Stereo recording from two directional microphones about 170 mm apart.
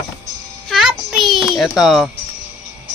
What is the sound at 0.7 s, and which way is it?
Music, centre (ahead or behind).